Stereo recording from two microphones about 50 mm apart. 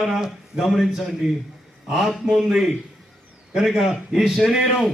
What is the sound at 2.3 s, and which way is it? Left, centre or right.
Speech, centre.